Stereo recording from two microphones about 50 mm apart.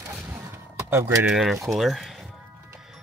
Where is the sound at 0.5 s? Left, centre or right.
Right.